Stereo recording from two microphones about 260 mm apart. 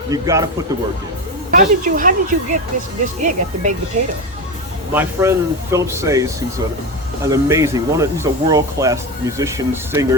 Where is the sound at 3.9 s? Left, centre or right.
Right.